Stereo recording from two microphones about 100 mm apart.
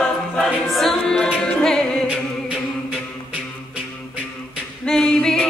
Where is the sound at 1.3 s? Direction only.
10° left (ahead or behind).